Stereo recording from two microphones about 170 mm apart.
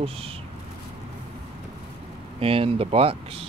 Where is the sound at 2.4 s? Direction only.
35° right (ahead or behind).